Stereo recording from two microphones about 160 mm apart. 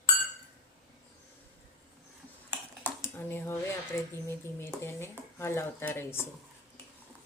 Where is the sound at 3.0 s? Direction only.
15° left (ahead or behind).